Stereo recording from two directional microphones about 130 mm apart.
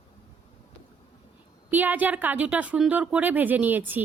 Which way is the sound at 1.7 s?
15° right (ahead or behind).